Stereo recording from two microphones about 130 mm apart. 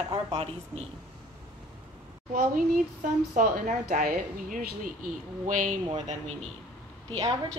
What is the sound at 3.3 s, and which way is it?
Speech, 80° right.